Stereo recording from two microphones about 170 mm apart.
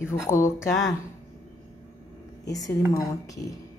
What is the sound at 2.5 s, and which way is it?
A woman's voice, 20° left (ahead or behind).